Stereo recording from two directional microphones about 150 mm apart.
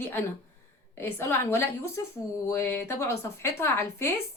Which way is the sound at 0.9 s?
15° left (ahead or behind).